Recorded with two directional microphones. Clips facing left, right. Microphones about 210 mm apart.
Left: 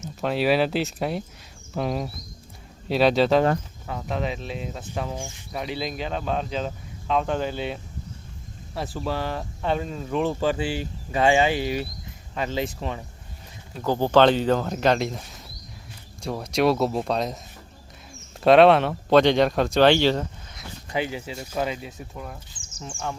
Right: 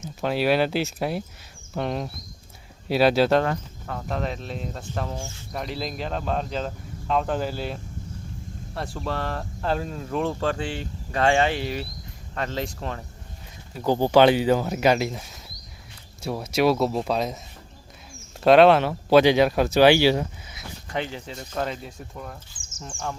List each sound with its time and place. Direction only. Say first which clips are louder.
0.2 s speech: even; centre (ahead or behind)
5.1 s speech: left 1 dB; 15° left (ahead or behind)
5.5 s speech: left 1 dB; centre (ahead or behind)
13.8 s speech: right 1 dB; 15° right (ahead or behind)
18.4 s speech: even; centre (ahead or behind)
20.9 s speech: left 2 dB; 10° left (ahead or behind)